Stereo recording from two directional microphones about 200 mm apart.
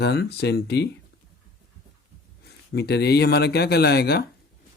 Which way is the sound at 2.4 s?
55° left (ahead or behind).